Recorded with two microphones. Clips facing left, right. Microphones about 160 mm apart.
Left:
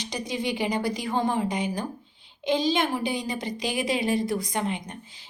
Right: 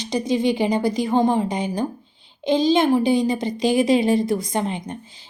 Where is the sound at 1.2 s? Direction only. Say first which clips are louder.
Right 7 dB; 40° right (ahead or behind).